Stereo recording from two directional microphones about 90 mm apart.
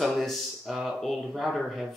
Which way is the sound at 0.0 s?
Centre (ahead or behind).